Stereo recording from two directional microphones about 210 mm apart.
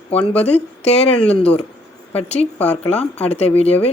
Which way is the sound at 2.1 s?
30° left (ahead or behind).